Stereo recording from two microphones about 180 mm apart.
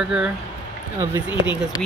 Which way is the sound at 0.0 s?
5° right (ahead or behind).